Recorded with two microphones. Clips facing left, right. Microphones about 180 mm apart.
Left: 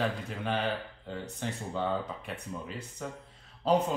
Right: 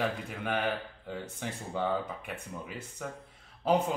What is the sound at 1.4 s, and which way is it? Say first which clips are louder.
Speech: even; 10° right (ahead or behind).